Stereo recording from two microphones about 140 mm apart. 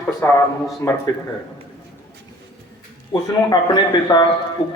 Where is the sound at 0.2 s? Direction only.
15° left (ahead or behind).